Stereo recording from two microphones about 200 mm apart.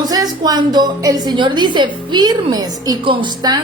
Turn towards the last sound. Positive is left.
turn(degrees=-20)  # may be behind; listen again after turning